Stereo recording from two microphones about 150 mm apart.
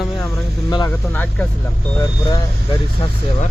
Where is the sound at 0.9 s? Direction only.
10° left (ahead or behind).